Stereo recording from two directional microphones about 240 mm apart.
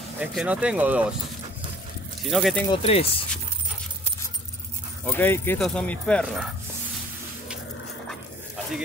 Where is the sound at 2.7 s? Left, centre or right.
Left.